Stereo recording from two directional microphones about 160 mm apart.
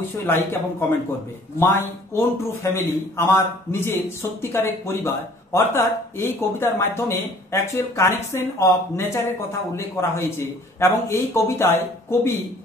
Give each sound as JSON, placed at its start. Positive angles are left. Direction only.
{"t": 0.3, "sound": "a man's voice", "side_deg": 15}